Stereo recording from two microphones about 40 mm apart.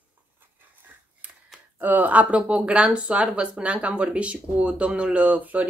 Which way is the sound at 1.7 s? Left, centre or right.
Right.